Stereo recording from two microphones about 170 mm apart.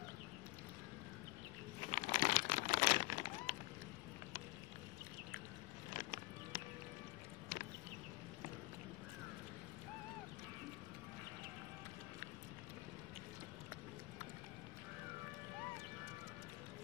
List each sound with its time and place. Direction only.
1.9 s crumpling: 45° left (ahead or behind)
2.5 s a sound: 40° left (ahead or behind)
5.9 s music: 55° left (ahead or behind)